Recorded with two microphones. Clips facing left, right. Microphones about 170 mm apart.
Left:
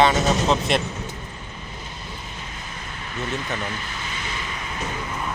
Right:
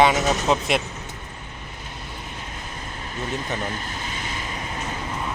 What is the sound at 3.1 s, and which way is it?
Speech, 40° right (ahead or behind).